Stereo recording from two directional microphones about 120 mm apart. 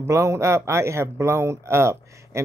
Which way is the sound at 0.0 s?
25° right (ahead or behind).